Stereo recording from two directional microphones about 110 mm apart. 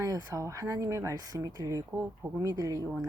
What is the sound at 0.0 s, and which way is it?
Speech, 30° right (ahead or behind).